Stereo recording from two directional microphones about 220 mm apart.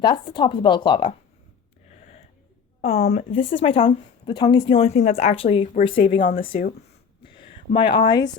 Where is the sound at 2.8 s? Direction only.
30° left (ahead or behind).